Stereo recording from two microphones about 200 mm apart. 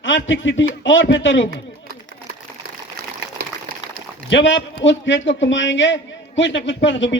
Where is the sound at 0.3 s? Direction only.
70° left (ahead or behind).